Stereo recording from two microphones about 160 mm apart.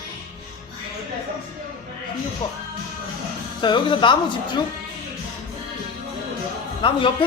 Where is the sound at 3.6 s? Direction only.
30° left (ahead or behind).